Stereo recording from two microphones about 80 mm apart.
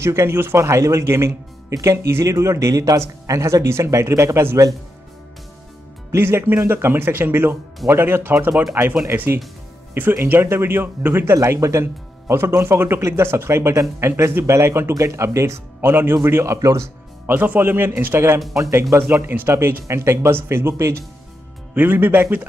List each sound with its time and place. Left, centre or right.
0.0 s speech: right
6.1 s speech: right
11.3 s speech: right
17.3 s speech: right
21.7 s speech: right